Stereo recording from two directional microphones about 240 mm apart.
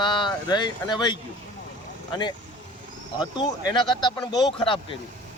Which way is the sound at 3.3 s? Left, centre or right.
Centre.